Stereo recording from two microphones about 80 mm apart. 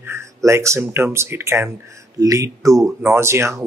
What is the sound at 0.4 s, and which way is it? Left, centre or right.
Speech, right.